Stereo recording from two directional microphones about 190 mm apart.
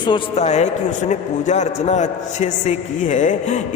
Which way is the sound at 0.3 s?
35° left (ahead or behind).